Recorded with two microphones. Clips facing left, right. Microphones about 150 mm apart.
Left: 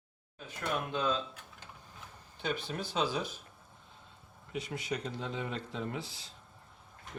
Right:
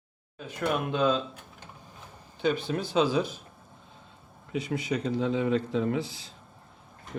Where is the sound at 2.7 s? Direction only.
90° right.